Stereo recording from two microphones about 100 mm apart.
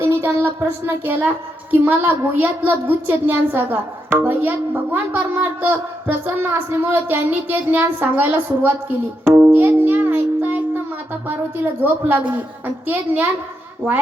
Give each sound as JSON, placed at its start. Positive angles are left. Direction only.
{"t": 0.0, "sound": "a woman's voice", "side_deg": -25}
{"t": 9.2, "sound": "music", "side_deg": -20}
{"t": 11.3, "sound": "a woman's voice", "side_deg": -15}